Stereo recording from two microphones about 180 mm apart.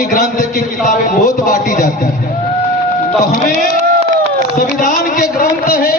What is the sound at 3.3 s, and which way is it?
Speech, 45° left (ahead or behind).